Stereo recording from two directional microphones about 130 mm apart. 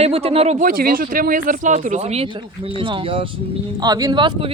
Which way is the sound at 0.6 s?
90° right.